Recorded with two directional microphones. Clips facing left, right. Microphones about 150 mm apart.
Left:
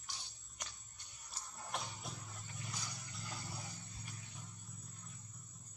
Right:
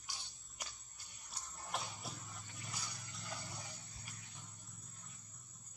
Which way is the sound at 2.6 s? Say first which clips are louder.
Left 2 dB; centre (ahead or behind).